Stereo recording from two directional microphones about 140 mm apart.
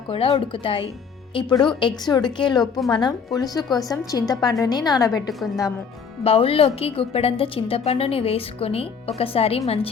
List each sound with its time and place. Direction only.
0.1 s speech: 40° left (ahead or behind)
2.6 s a woman's voice: centre (ahead or behind)
3.0 s a woman's voice: 25° left (ahead or behind)
5.3 s a woman's voice: centre (ahead or behind)
6.2 s a woman's voice: 45° left (ahead or behind)